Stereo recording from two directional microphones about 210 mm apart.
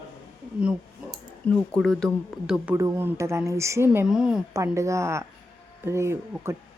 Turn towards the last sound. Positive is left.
turn(degrees=-10)  # may be behind; listen again after turning